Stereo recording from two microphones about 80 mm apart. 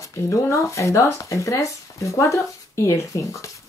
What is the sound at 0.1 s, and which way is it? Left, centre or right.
Speech, left.